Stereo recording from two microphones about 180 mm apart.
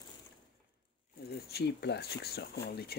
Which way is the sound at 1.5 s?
65° left (ahead or behind).